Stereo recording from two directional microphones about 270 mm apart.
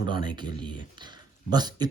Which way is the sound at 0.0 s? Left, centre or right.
Centre.